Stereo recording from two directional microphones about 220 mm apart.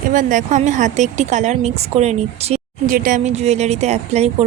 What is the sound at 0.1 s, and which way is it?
A woman's voice, 35° right (ahead or behind).